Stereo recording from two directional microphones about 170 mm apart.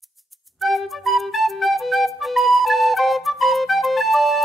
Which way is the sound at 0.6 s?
Centre (ahead or behind).